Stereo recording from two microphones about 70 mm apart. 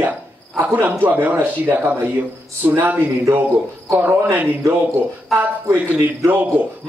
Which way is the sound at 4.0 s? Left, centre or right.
Right.